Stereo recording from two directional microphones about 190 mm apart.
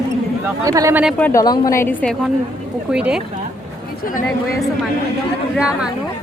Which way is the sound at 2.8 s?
5° right (ahead or behind).